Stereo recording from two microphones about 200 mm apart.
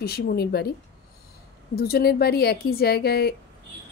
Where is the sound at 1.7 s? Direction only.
50° left (ahead or behind).